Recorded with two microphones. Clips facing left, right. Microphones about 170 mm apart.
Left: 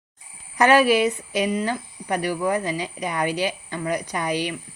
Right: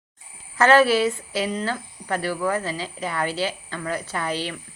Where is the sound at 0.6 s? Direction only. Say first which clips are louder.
Even; 15° left (ahead or behind).